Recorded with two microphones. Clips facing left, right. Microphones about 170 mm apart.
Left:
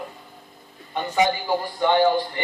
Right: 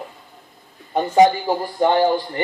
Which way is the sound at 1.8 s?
40° right (ahead or behind).